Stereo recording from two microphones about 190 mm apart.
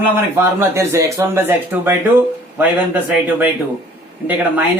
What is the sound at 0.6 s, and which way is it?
Speech, 15° right (ahead or behind).